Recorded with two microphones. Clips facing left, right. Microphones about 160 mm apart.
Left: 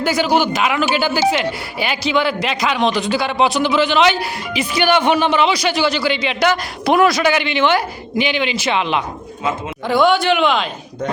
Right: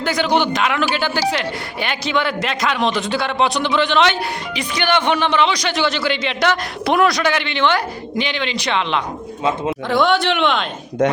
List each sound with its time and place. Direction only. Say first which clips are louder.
0.0 s a man's voice: left 2 dB; 5° left (ahead or behind)
11.0 s speech: right 6 dB; 75° right (ahead or behind)